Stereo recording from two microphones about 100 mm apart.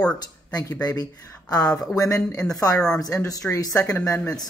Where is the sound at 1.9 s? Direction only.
35° left (ahead or behind).